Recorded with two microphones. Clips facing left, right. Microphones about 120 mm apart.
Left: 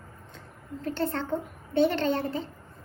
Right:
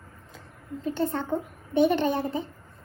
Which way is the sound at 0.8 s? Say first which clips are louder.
Right 2 dB; 15° right (ahead or behind).